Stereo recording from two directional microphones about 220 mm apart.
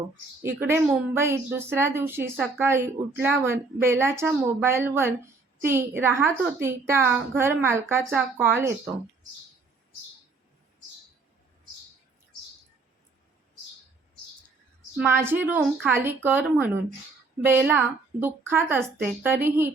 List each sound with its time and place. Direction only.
0.4 s a woman's voice: 10° right (ahead or behind)
14.9 s a woman's voice: 10° right (ahead or behind)